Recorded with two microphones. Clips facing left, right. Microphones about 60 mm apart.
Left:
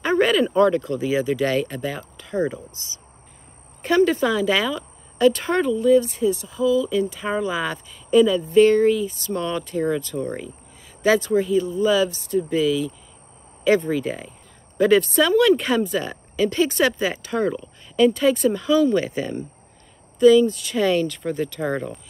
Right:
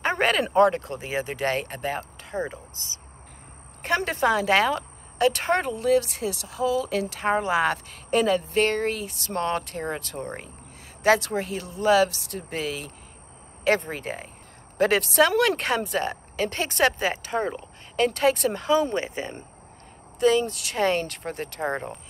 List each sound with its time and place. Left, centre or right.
0.0 s a sound: right
0.6 s speech: right
11.1 s speech: right
15.1 s speech: right
17.6 s speech: right
18.7 s speech: right
20.2 s speech: right